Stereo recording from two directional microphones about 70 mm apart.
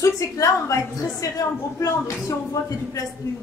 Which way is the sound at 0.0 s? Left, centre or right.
Left.